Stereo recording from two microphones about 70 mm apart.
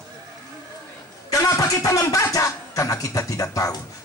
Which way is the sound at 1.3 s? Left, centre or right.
Left.